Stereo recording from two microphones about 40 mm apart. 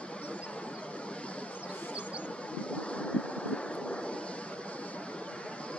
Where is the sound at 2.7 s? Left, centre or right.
Left.